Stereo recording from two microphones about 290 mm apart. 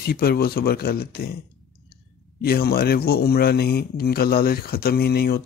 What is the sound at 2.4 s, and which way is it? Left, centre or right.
Speech, left.